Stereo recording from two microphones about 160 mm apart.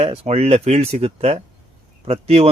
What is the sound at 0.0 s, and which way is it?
A man's voice, 40° right (ahead or behind).